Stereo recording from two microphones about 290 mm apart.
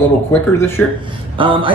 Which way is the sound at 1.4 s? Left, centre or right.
Centre.